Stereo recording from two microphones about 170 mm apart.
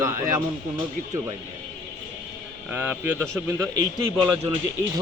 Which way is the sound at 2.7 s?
10° right (ahead or behind).